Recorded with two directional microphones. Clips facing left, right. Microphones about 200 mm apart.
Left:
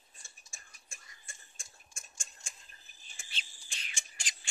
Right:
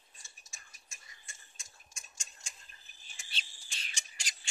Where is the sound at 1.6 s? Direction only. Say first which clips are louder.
Left 2 dB; 50° left (ahead or behind).